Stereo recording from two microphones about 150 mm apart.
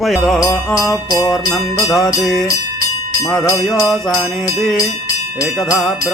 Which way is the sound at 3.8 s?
Centre (ahead or behind).